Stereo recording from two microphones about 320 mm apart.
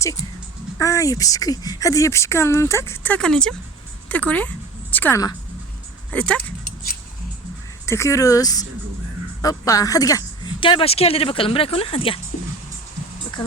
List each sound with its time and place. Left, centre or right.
0.8 s speech: centre
7.9 s speech: centre